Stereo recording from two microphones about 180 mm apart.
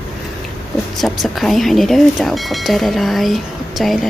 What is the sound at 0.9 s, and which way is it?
A woman's voice, centre (ahead or behind).